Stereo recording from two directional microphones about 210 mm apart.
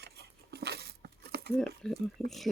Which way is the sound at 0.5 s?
50° right (ahead or behind).